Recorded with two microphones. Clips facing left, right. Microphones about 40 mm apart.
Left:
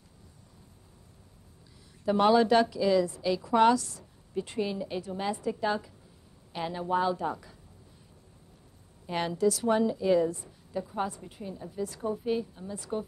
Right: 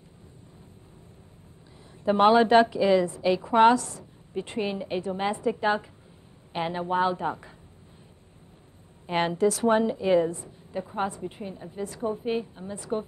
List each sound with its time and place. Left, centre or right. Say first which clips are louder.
2.0 s a woman's voice: right 4 dB; right
9.0 s a woman's voice: right 4 dB; right